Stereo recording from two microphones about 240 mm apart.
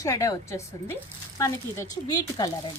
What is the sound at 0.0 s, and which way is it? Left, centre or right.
Speech, centre.